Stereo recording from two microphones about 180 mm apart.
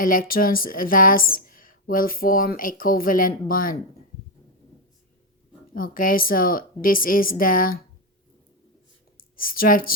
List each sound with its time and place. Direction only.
0.0 s a woman's voice: 50° left (ahead or behind)
5.7 s a woman's voice: 50° left (ahead or behind)
9.1 s speech: 50° left (ahead or behind)